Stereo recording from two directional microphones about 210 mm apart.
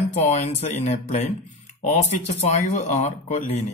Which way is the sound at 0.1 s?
35° left (ahead or behind).